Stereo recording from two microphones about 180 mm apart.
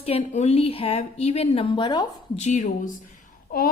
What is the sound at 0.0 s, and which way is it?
A woman's voice, 35° left (ahead or behind).